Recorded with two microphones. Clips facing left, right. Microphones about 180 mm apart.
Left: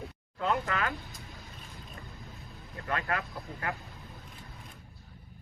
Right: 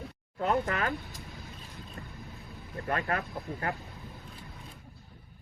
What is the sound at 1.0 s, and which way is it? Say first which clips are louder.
Vehicle: right 3 dB; centre (ahead or behind).